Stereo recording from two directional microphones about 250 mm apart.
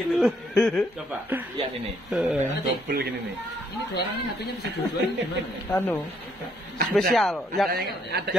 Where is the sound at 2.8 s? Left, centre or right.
Right.